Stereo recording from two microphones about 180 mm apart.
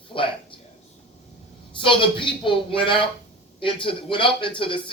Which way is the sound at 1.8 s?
30° left (ahead or behind).